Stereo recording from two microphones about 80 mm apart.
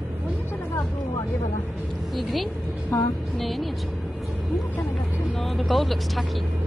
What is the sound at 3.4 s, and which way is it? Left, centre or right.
Speech, centre.